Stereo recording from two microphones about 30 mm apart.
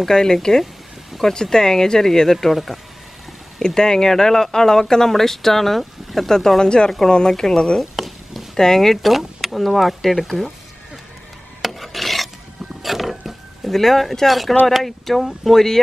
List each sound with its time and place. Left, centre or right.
0.1 s speech: left
2.5 s speech: centre
3.6 s speech: left; by 6.3 s centre
6.6 s speech: left
7.8 s a sound: centre
8.5 s speech: centre
8.9 s speech: centre
11.6 s filing: centre
12.8 s music: centre
13.7 s speech: centre